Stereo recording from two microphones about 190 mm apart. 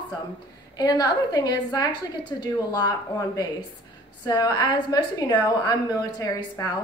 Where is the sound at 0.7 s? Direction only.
20° left (ahead or behind).